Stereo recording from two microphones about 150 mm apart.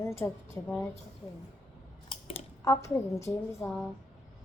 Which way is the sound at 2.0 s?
40° left (ahead or behind).